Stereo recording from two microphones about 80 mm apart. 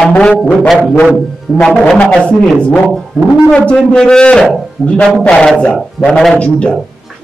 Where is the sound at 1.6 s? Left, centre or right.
Centre.